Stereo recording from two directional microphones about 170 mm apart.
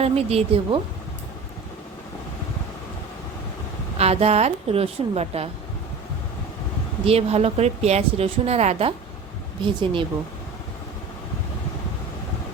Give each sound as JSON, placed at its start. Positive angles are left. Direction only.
{"t": 0.0, "sound": "a woman's voice", "side_deg": -35}
{"t": 3.9, "sound": "a woman's voice", "side_deg": -40}
{"t": 7.0, "sound": "a woman's voice", "side_deg": -35}